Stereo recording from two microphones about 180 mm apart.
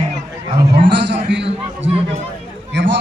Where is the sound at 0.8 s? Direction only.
75° right (ahead or behind).